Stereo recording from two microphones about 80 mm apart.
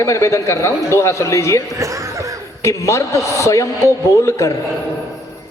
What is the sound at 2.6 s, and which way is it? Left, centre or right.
A man's voice, left.